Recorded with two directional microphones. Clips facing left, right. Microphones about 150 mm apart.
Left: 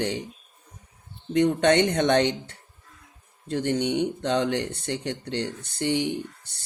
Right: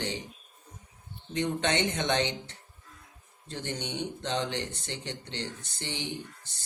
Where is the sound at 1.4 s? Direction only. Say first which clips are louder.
Left 9 dB; 55° left (ahead or behind).